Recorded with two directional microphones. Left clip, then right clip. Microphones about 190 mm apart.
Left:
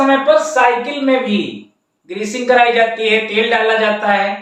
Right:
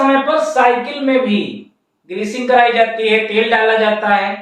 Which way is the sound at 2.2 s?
15° left (ahead or behind).